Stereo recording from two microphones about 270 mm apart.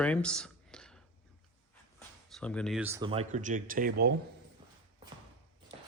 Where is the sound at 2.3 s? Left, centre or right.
Centre; by 4.1 s right.